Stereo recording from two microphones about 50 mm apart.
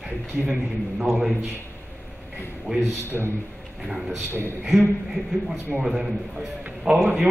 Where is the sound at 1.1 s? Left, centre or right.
Centre.